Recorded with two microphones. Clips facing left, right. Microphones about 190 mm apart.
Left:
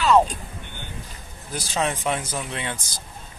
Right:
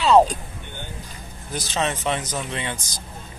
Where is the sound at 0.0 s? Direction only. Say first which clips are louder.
Right 3 dB; 35° right (ahead or behind).